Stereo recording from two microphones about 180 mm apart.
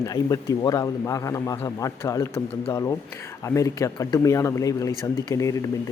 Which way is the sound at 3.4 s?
15° left (ahead or behind).